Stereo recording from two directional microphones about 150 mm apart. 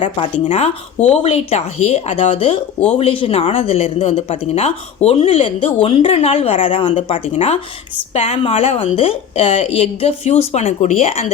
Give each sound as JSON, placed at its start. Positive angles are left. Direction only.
{"t": 0.2, "sound": "a woman's voice", "side_deg": 45}